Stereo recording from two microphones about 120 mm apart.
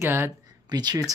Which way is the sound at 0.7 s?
35° right (ahead or behind).